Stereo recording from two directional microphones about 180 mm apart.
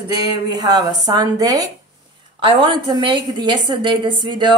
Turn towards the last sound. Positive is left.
turn(degrees=-25)  # may be behind; listen again after turning